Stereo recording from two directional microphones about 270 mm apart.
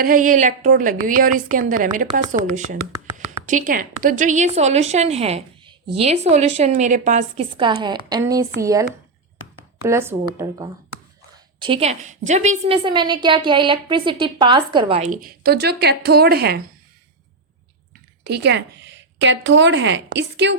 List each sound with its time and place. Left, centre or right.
0.0 s speech: right; by 10.7 s centre
11.6 s speech: right
18.2 s a sound: right
19.5 s speech: right